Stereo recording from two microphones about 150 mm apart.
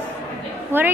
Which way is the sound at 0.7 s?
15° right (ahead or behind).